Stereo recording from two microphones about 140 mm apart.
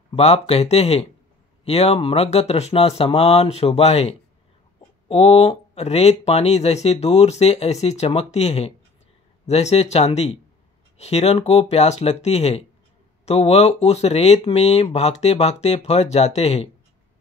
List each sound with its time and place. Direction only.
0.1 s speech: 50° left (ahead or behind)